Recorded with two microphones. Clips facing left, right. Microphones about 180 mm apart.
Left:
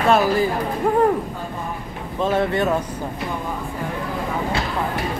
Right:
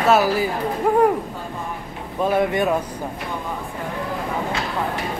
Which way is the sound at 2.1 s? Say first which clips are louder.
Right 1 dB; 10° right (ahead or behind).